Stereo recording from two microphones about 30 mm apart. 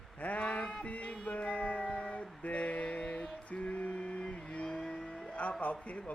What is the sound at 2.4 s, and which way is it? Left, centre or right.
Mantra, left.